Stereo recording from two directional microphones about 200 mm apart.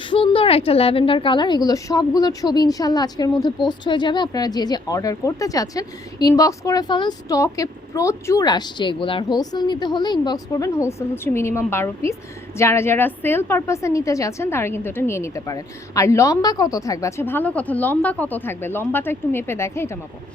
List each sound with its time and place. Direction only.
0.1 s a woman's voice: 25° left (ahead or behind)